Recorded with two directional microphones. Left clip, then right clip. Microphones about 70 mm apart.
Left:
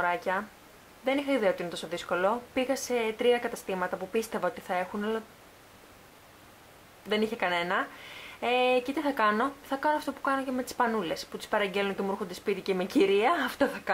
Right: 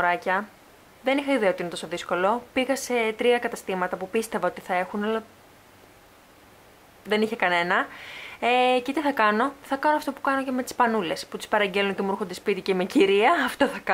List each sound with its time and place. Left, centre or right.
0.0 s speech: right
7.1 s speech: centre